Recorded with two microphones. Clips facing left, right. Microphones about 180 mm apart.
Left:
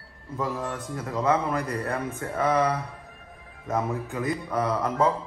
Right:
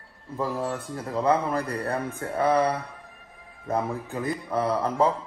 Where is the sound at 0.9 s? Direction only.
35° right (ahead or behind).